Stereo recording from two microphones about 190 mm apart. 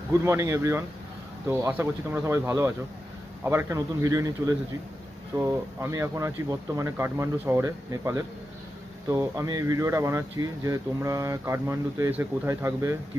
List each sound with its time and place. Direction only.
0.1 s speech: 15° right (ahead or behind)